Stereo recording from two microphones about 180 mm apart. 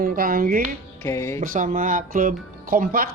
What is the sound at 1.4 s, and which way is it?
Speech, 50° right (ahead or behind).